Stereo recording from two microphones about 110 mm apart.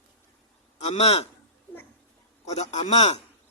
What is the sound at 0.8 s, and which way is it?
Speech, 80° left.